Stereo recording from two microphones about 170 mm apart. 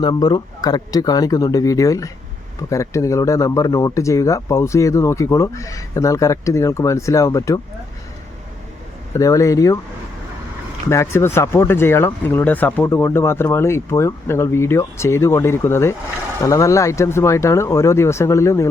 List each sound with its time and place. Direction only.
0.0 s speech: 25° left (ahead or behind)
9.1 s speech: 20° left (ahead or behind)
10.8 s speech: 15° left (ahead or behind)